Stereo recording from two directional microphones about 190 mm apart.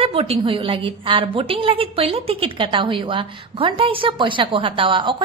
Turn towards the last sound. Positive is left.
turn(degrees=-25)  # may be behind; listen again after turning